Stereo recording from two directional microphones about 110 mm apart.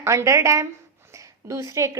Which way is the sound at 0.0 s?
25° right (ahead or behind).